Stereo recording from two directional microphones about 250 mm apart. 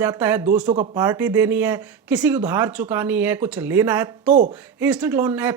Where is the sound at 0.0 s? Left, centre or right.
Centre.